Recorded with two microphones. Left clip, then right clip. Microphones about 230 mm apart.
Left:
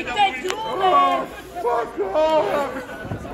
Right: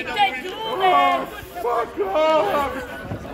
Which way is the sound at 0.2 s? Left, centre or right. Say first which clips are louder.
Left 1 dB; right.